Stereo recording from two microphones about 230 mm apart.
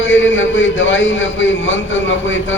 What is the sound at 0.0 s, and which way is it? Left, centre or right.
A man's voice, left.